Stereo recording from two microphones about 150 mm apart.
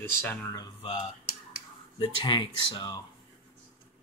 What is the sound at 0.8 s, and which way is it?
Speech, 40° left (ahead or behind).